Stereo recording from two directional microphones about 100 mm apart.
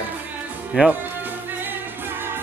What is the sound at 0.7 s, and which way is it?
Speech, 10° right (ahead or behind).